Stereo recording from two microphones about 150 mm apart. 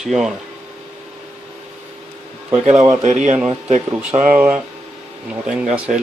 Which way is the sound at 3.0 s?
50° right (ahead or behind).